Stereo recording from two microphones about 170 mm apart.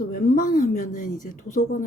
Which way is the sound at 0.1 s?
50° left (ahead or behind).